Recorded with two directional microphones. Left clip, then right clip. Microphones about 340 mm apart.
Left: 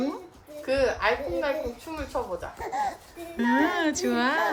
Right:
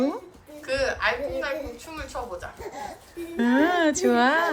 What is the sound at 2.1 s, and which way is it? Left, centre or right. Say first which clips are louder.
Speech: left 3 dB; centre.